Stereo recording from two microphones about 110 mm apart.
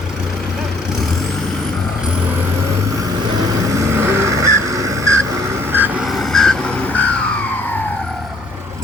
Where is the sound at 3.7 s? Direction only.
25° right (ahead or behind).